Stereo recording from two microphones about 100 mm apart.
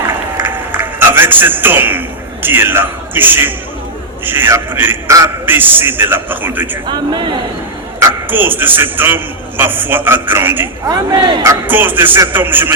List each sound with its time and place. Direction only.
0.3 s a sound: 20° right (ahead or behind)
4.3 s a man's voice: 25° right (ahead or behind)
6.8 s a man's voice: 50° right (ahead or behind)
8.3 s a man's voice: 20° right (ahead or behind)
10.8 s a man's voice: 45° right (ahead or behind)
11.6 s a man's voice: 20° right (ahead or behind)